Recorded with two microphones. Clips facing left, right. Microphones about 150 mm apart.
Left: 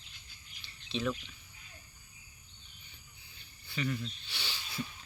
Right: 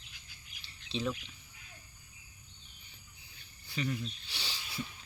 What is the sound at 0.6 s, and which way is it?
Bird, 30° right (ahead or behind).